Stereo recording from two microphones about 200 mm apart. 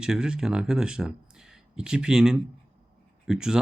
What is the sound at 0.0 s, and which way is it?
Speech, 5° right (ahead or behind).